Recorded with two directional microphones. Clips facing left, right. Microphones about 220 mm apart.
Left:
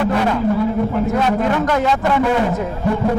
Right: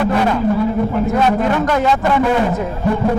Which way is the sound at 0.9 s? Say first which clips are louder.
Right 2 dB; 25° right (ahead or behind).